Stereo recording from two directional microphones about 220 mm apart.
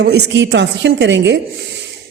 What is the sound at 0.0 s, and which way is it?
A woman's voice, 50° right (ahead or behind).